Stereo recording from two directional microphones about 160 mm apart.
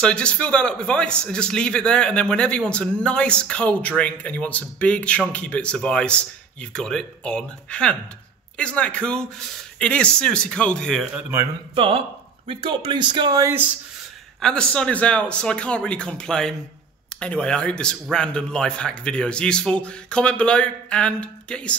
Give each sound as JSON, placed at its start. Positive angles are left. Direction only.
{"t": 0.0, "sound": "a man's voice", "side_deg": 5}
{"t": 11.7, "sound": "speech", "side_deg": -35}
{"t": 14.4, "sound": "speech", "side_deg": 5}